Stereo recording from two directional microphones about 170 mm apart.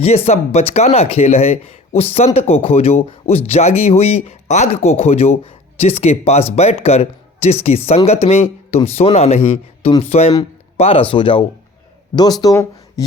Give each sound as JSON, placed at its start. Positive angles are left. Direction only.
{"t": 0.0, "sound": "speech", "side_deg": 40}